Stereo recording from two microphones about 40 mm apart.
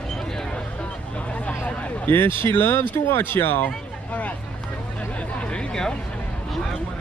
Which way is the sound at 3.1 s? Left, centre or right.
Left.